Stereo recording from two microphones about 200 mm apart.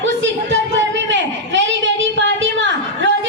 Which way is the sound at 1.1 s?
65° right (ahead or behind).